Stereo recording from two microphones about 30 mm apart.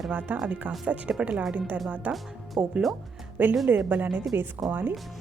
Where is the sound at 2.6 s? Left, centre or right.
Right.